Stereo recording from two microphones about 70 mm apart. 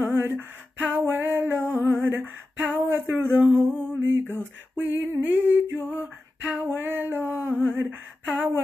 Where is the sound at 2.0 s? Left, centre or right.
Right.